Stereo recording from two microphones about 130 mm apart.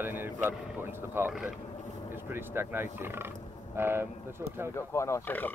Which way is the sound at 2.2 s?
15° right (ahead or behind).